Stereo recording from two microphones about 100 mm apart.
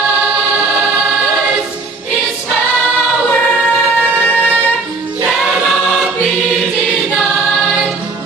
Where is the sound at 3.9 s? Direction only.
15° right (ahead or behind).